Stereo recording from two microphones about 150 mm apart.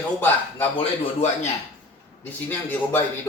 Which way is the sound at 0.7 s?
45° left (ahead or behind).